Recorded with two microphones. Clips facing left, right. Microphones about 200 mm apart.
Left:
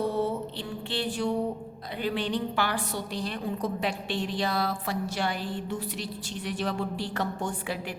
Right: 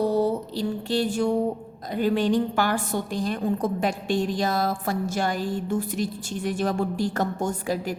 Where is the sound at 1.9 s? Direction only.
45° right (ahead or behind).